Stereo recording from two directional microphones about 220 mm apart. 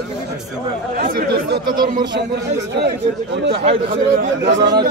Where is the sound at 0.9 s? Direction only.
45° right (ahead or behind).